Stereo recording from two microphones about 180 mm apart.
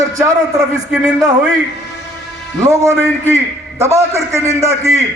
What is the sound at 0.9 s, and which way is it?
Speech, 5° right (ahead or behind).